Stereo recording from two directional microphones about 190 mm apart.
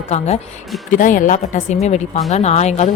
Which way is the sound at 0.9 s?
45° left (ahead or behind).